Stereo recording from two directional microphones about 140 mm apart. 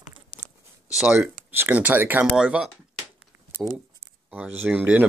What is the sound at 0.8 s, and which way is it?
Speech, 5° right (ahead or behind).